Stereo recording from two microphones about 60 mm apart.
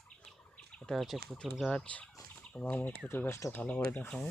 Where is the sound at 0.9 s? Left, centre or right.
Centre.